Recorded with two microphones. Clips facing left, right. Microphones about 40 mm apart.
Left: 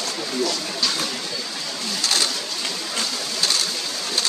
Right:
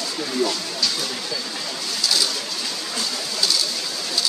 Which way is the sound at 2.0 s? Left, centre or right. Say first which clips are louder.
Even; left.